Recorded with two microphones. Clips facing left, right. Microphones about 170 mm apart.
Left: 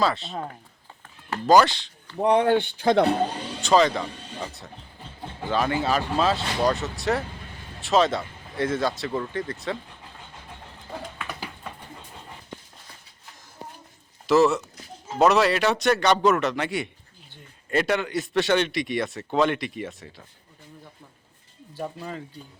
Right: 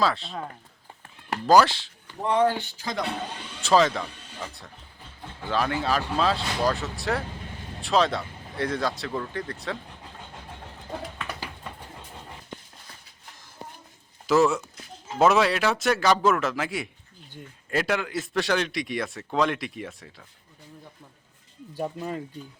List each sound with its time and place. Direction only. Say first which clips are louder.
0.0 s a man's voice: left 1 dB; centre (ahead or behind)
1.5 s a man's voice: left 1 dB; centre (ahead or behind)
2.3 s speech: left 2 dB; 65° left (ahead or behind)
3.6 s a man's voice: left 1 dB; centre (ahead or behind)
5.5 s a man's voice: left 2 dB; centre (ahead or behind)
14.3 s a man's voice: left 2 dB; centre (ahead or behind)